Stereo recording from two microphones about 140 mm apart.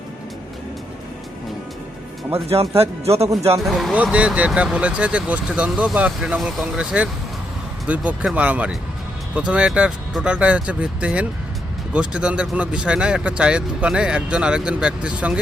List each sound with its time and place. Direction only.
2.3 s speech: 45° right (ahead or behind)
3.6 s speech: centre (ahead or behind)